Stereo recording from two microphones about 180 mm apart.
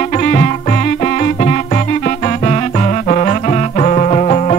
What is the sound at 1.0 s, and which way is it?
Music, 45° left (ahead or behind).